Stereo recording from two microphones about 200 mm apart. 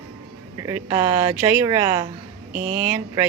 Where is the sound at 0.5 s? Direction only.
15° right (ahead or behind).